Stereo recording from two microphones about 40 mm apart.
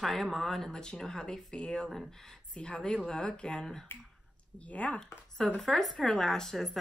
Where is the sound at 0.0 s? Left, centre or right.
Centre; by 3.6 s left.